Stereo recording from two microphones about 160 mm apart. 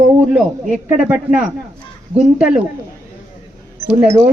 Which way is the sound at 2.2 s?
5° right (ahead or behind).